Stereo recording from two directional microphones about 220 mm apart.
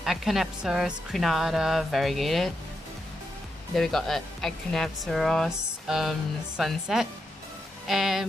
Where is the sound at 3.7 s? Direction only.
Centre (ahead or behind).